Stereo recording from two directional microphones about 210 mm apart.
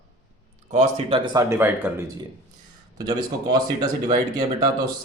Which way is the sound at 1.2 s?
15° right (ahead or behind).